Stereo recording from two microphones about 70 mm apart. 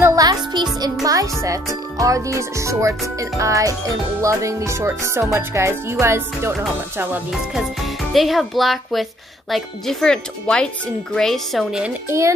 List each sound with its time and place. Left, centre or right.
0.1 s music: right
1.0 s speech: right
4.2 s music: right
7.5 s a child's voice: centre